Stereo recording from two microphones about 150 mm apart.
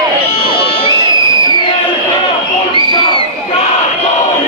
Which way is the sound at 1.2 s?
30° right (ahead or behind).